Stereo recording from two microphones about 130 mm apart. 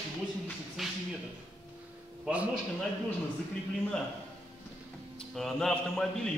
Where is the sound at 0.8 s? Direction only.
Centre (ahead or behind).